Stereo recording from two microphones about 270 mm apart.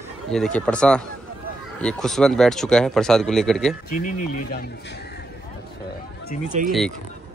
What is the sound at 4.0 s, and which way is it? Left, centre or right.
Speech, left.